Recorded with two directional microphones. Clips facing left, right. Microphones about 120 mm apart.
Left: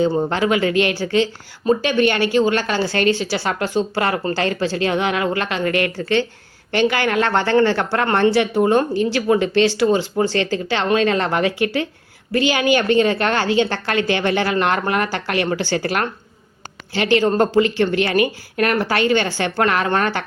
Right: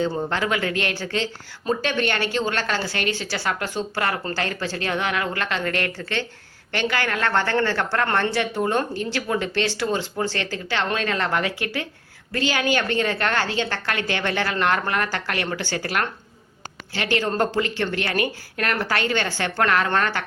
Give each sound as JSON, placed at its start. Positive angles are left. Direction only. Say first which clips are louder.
{"t": 0.2, "sound": "speech", "louder": "left 6 dB", "side_deg": 20}
{"t": 2.8, "sound": "speech", "louder": "left 8 dB", "side_deg": 30}
{"t": 3.2, "sound": "speech", "louder": "left 5 dB", "side_deg": 20}